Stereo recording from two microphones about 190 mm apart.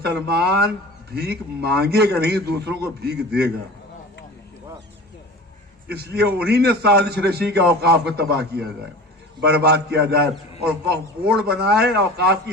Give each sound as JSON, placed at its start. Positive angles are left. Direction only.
{"t": 0.0, "sound": "a man's voice", "side_deg": -60}
{"t": 5.9, "sound": "a man's voice", "side_deg": -55}